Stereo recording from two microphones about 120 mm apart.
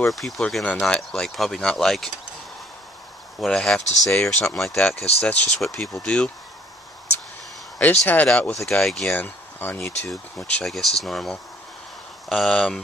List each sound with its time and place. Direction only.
0.1 s speech: centre (ahead or behind)
3.3 s speech: 5° left (ahead or behind)
4.9 s speech: 60° left (ahead or behind)
5.6 s speech: 5° left (ahead or behind)
7.8 s speech: 15° left (ahead or behind)